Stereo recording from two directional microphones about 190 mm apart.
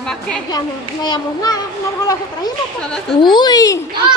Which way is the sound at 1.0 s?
20° left (ahead or behind).